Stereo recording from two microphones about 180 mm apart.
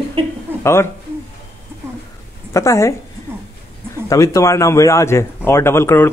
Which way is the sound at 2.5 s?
15° left (ahead or behind).